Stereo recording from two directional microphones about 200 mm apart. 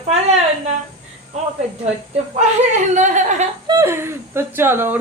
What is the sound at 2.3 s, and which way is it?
Speech, 35° right (ahead or behind).